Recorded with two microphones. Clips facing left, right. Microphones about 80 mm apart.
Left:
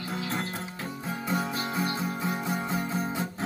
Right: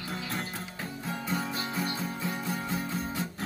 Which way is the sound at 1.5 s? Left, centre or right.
Centre.